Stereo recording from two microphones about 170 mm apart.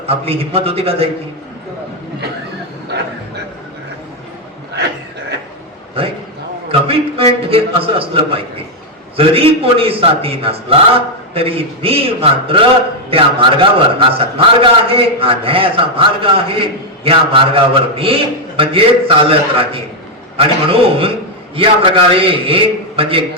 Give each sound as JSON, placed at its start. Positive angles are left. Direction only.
{"t": 0.1, "sound": "a man's voice", "side_deg": -35}
{"t": 6.7, "sound": "a sound", "side_deg": -35}
{"t": 7.5, "sound": "a man's voice", "side_deg": -35}